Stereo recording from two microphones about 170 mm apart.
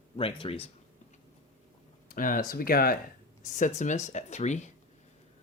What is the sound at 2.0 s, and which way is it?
Speech, 55° left (ahead or behind).